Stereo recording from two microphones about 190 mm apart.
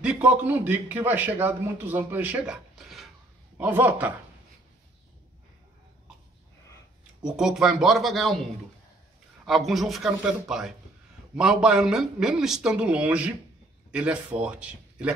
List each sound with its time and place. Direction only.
0.0 s a man's voice: 5° right (ahead or behind)
7.3 s a man's voice: centre (ahead or behind)
9.7 s a man's voice: centre (ahead or behind)